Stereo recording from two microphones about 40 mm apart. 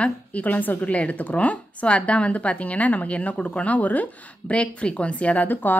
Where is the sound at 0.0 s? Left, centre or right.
Left.